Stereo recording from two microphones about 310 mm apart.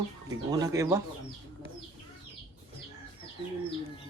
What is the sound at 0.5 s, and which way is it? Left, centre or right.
Speech, centre.